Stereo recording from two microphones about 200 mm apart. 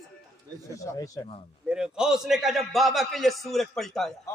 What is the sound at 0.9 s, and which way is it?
Speech, 15° left (ahead or behind).